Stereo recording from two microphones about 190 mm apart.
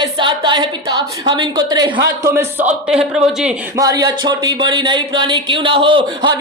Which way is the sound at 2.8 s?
5° right (ahead or behind).